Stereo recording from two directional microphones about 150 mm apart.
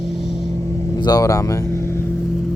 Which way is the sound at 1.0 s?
25° left (ahead or behind).